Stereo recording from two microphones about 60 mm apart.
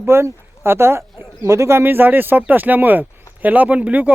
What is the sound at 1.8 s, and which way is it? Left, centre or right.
Speech, right.